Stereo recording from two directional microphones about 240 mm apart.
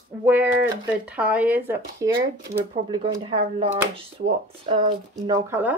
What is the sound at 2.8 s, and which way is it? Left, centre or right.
Speech, centre.